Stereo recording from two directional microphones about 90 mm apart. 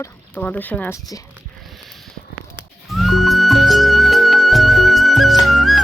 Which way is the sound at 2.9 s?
Centre (ahead or behind).